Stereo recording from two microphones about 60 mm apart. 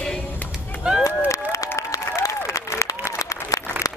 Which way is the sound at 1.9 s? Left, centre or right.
Left.